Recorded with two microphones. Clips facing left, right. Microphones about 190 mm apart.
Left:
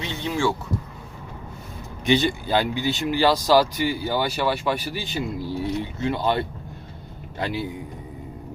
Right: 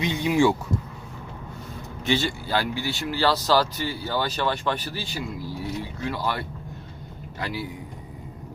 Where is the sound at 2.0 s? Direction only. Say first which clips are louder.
Left 4 dB; 20° left (ahead or behind).